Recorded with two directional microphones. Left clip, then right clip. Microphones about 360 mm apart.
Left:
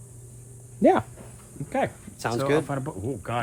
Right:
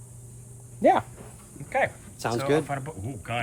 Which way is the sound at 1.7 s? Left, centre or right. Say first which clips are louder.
Right 1 dB; centre.